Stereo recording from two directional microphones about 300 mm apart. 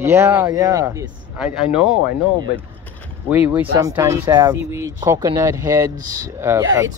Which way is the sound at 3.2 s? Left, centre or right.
Centre.